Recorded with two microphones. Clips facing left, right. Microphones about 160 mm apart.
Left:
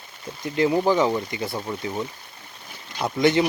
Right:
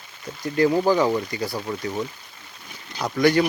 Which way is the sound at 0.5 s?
20° left (ahead or behind).